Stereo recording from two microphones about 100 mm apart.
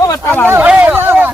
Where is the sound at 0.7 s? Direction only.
10° right (ahead or behind).